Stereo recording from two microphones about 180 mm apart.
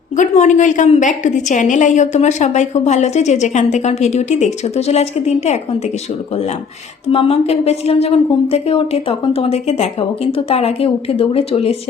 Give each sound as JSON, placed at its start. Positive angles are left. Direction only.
{"t": 0.2, "sound": "a woman's voice", "side_deg": 40}
{"t": 7.1, "sound": "a woman's voice", "side_deg": 30}